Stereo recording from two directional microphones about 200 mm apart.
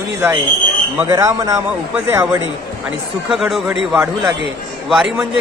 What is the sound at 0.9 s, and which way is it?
A man's voice, 15° right (ahead or behind).